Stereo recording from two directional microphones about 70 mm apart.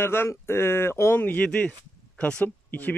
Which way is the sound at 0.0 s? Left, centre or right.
Left.